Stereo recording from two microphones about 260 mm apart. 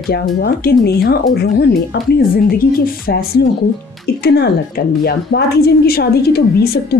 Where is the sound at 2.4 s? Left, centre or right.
Left.